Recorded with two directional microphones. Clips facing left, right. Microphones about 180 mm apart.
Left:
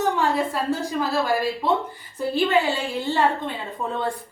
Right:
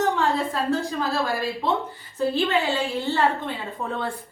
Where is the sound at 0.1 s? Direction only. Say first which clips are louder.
Left 1 dB; 15° left (ahead or behind).